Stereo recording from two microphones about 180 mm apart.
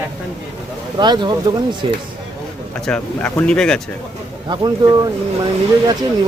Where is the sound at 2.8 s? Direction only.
5° left (ahead or behind).